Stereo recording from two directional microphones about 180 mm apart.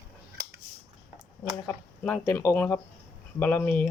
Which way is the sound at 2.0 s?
15° left (ahead or behind).